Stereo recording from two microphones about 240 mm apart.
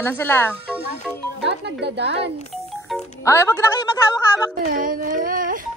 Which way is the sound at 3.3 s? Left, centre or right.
Centre.